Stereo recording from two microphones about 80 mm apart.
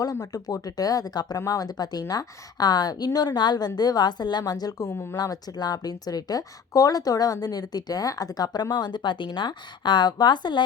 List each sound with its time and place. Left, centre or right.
0.0 s a woman's voice: left
4.9 s speech: left
5.1 s speech: left
8.7 s a woman's voice: left